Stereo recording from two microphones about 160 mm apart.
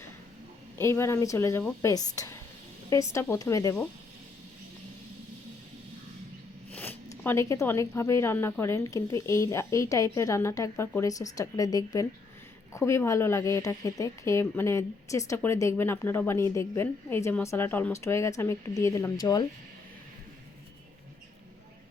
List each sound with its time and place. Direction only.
0.8 s a woman's voice: 15° left (ahead or behind)
6.7 s a woman's voice: 10° left (ahead or behind)